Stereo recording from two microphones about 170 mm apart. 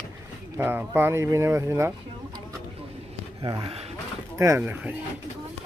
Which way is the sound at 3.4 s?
30° right (ahead or behind).